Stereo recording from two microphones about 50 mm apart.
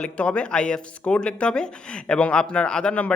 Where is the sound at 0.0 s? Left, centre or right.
Left.